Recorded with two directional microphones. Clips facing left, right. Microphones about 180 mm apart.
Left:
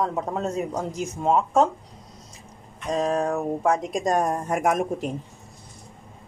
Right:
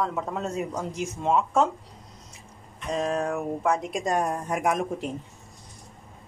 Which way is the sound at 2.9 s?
35° left (ahead or behind).